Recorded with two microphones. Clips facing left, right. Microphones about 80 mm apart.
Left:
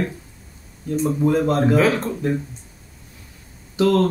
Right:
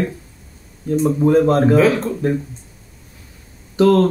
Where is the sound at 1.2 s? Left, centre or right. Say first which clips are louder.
Right 5 dB; right.